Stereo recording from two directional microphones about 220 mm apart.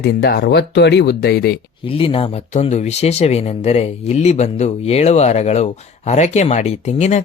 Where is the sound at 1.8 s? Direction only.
25° left (ahead or behind).